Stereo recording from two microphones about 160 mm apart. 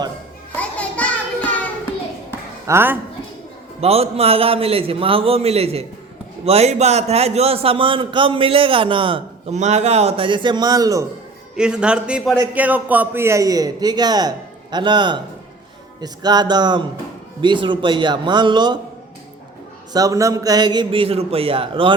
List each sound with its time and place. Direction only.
0.5 s music: 10° left (ahead or behind)
2.6 s speech: 15° right (ahead or behind)
3.8 s a man's voice: 40° right (ahead or behind)
9.6 s a man's voice: 45° right (ahead or behind); by 11.0 s 20° right (ahead or behind)
11.5 s a man's voice: 5° right (ahead or behind); by 18.8 s 25° right (ahead or behind)
19.9 s a man's voice: 20° right (ahead or behind)